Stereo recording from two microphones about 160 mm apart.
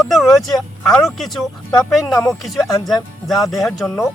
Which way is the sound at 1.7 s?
20° left (ahead or behind).